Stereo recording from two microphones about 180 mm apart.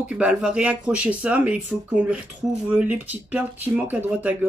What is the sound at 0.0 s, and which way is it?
Speech, 5° right (ahead or behind).